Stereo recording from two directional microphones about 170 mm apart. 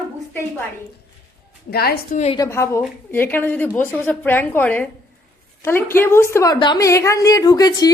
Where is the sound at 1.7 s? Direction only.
65° left (ahead or behind).